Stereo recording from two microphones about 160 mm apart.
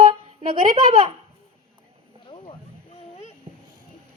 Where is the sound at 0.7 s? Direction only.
35° right (ahead or behind).